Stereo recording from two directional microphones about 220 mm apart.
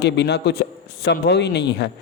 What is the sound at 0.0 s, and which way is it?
A man's voice, 50° left (ahead or behind).